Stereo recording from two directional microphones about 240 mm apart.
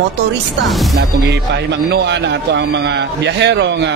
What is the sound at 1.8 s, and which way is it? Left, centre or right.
A man's voice, right.